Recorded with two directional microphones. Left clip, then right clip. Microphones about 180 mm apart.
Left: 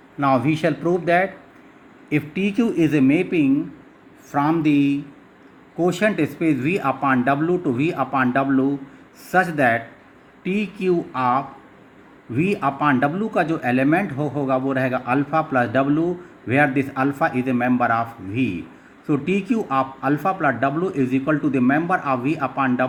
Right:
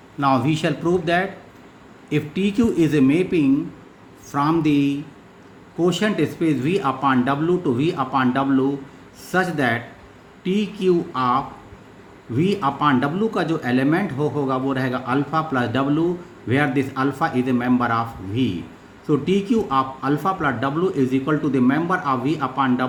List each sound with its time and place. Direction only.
0.2 s a man's voice: 40° left (ahead or behind)
2.3 s speech: 20° right (ahead or behind)
4.3 s a man's voice: 35° left (ahead or behind)
12.5 s speech: 45° left (ahead or behind)